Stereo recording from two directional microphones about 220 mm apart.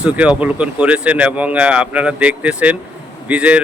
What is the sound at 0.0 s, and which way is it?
A man's voice, 5° right (ahead or behind).